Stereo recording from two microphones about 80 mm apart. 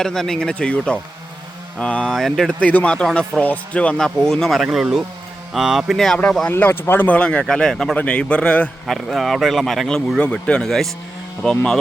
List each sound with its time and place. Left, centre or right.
0.0 s speech: centre
2.6 s speech: centre
4.6 s speech: centre
6.5 s speech: left
7.2 s speech: centre
8.9 s speech: centre
10.2 s speech: centre